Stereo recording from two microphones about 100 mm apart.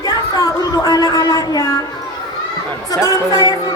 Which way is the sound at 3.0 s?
35° left (ahead or behind).